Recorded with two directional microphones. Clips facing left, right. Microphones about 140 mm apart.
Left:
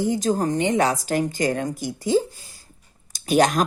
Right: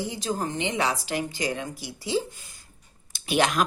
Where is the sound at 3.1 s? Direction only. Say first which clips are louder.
Left 5 dB; 40° left (ahead or behind).